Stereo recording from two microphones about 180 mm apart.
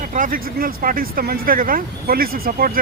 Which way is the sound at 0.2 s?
50° right (ahead or behind).